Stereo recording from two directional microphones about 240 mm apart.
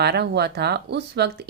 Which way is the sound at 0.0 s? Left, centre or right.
Right.